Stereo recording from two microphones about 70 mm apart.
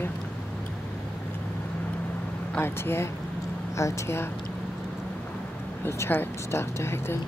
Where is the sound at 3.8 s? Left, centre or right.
Left.